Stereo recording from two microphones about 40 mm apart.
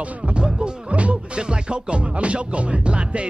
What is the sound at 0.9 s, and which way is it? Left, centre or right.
Music, right.